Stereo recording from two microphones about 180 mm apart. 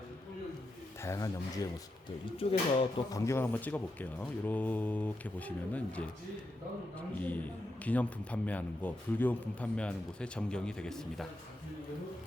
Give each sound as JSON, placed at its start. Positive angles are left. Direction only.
{"t": 1.0, "sound": "a man's voice", "side_deg": 20}
{"t": 2.0, "sound": "speech", "side_deg": 30}
{"t": 3.1, "sound": "a man's voice", "side_deg": 15}
{"t": 7.2, "sound": "a man's voice", "side_deg": 10}